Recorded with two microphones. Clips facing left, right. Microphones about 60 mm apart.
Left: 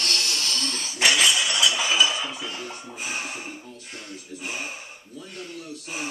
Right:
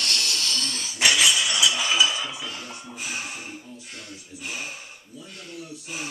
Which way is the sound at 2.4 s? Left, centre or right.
Centre.